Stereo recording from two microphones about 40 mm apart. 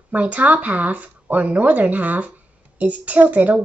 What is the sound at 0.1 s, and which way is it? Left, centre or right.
A woman's voice, right.